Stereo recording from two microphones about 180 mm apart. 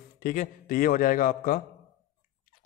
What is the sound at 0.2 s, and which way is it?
A man's voice, 50° left (ahead or behind).